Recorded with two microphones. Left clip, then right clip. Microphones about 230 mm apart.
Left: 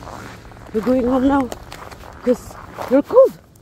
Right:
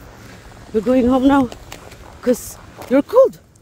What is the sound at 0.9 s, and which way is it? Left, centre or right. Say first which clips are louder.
Speech: right 3 dB; right.